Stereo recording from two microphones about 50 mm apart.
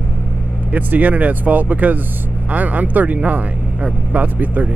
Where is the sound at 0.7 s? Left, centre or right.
Right.